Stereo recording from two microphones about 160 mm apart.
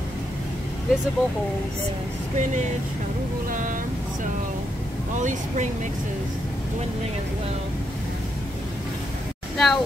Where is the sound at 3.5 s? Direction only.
55° right (ahead or behind).